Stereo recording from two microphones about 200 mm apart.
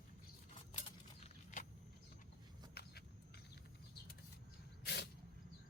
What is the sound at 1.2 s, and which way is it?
Vehicle, 40° left (ahead or behind).